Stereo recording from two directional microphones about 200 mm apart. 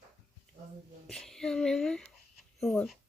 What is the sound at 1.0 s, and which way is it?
Speech, 5° left (ahead or behind).